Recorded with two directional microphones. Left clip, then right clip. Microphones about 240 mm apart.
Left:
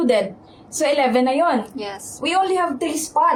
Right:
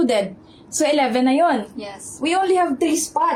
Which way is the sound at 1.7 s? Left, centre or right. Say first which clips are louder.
Left 3 dB; left.